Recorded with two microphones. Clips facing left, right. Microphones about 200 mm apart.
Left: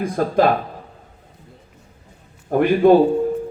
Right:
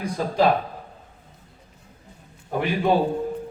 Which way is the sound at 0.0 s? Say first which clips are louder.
Left 5 dB; 55° left (ahead or behind).